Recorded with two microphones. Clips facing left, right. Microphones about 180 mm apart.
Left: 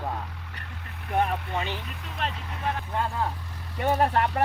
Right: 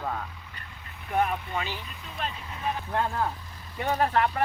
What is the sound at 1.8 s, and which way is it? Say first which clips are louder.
Speech: left 2 dB; 70° left (ahead or behind).